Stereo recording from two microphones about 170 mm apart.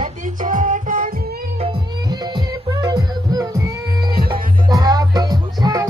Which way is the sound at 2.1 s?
25° right (ahead or behind).